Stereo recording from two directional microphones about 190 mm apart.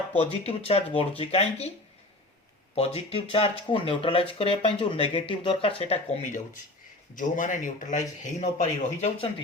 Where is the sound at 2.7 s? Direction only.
30° left (ahead or behind).